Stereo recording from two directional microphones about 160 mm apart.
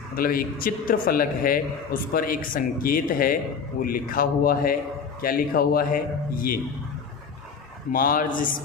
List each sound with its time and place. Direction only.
0.2 s a man's voice: 65° left (ahead or behind)
7.9 s a man's voice: 60° left (ahead or behind)